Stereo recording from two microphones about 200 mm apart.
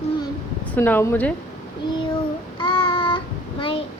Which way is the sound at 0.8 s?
10° left (ahead or behind).